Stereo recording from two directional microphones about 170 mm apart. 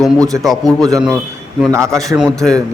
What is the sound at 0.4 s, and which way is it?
Speech, centre (ahead or behind).